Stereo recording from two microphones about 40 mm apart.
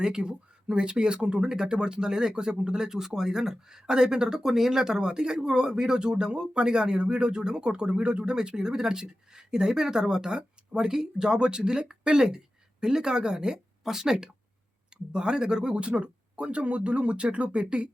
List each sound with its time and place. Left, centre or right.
0.0 s speech: centre